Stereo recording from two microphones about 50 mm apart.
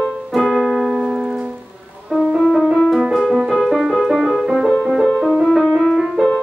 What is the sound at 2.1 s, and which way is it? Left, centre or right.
Music, centre.